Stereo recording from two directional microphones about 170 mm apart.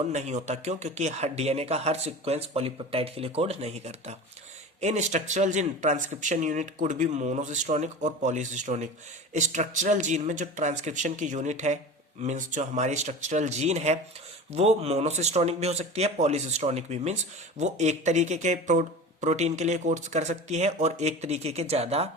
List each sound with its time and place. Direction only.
0.1 s speech: 40° right (ahead or behind)